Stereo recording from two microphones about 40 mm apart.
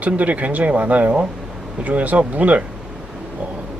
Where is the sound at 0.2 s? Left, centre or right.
Right.